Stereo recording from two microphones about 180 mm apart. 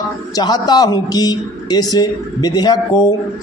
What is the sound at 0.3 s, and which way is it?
Speech, 20° left (ahead or behind).